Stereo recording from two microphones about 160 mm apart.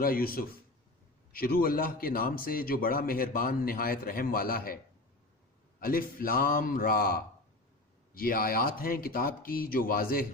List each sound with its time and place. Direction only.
0.0 s a man's voice: 65° left (ahead or behind)
5.8 s a man's voice: 65° left (ahead or behind)